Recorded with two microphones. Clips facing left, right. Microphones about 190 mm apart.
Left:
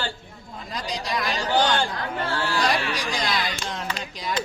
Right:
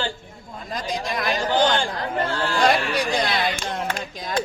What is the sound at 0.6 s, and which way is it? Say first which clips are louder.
Speech: right 3 dB; 50° right (ahead or behind).